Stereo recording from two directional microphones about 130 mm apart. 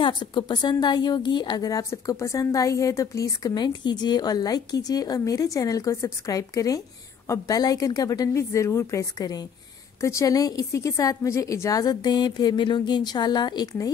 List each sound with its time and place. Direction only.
0.0 s a woman's voice: 40° left (ahead or behind)